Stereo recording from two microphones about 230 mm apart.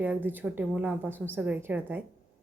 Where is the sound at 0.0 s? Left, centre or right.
Centre.